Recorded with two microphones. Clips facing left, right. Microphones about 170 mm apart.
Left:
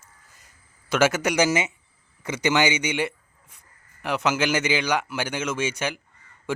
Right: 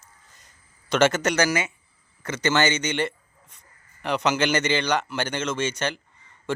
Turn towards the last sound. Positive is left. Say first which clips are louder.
# even
turn(degrees=10)  # may be behind; listen again after turning